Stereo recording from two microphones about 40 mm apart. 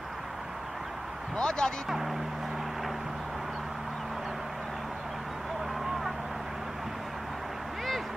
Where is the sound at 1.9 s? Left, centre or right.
Centre.